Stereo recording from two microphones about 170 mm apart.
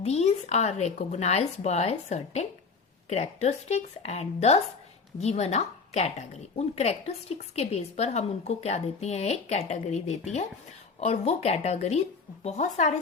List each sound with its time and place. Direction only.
0.0 s a woman's voice: 40° left (ahead or behind)